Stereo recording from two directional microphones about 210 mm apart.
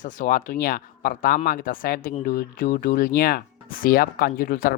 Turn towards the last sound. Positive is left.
turn(degrees=45)  # may be behind; listen again after turning